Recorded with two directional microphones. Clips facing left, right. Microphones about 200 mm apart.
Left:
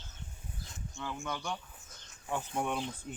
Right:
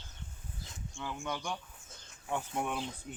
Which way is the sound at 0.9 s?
15° right (ahead or behind).